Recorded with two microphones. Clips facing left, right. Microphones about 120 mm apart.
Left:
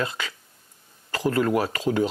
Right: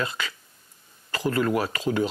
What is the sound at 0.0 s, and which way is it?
Speech, 45° left (ahead or behind).